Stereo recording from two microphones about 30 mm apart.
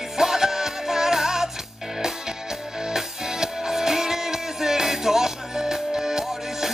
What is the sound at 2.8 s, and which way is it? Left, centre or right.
Music, centre.